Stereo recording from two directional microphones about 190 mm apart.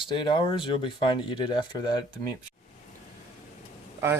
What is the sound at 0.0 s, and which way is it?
Speech, 25° left (ahead or behind).